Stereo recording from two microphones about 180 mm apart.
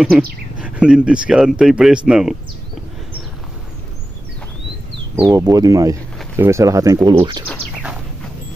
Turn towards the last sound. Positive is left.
turn(degrees=-25)  # may be behind; listen again after turning